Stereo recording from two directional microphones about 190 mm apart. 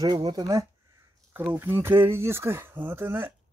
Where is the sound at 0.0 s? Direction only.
20° right (ahead or behind).